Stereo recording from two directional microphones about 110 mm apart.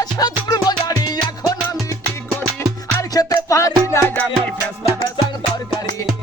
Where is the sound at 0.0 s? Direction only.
40° left (ahead or behind).